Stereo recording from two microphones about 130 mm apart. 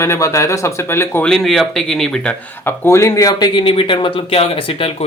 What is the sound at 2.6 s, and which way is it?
Speech, 20° left (ahead or behind).